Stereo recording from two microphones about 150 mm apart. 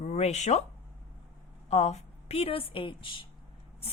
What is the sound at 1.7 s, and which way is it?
A woman's voice, 45° left (ahead or behind).